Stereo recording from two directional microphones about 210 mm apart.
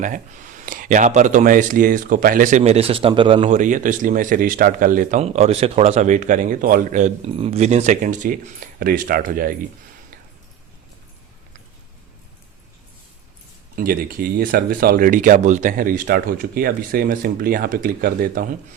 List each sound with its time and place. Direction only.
0.0 s speech: 40° right (ahead or behind)
13.7 s speech: 45° right (ahead or behind)